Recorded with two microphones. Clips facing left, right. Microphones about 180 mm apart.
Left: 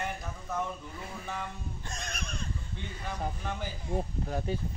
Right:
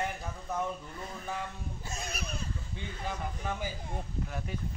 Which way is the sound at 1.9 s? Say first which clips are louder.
Right 2 dB; 5° right (ahead or behind).